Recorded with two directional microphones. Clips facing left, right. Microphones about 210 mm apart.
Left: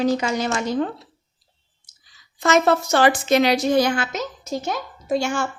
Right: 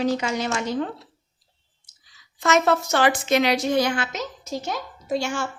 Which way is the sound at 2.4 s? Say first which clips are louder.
Left 2 dB; 35° left (ahead or behind).